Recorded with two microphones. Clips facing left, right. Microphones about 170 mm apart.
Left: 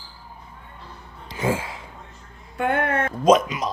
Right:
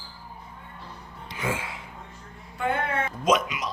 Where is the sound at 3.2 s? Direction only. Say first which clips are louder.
Left 7 dB; 35° left (ahead or behind).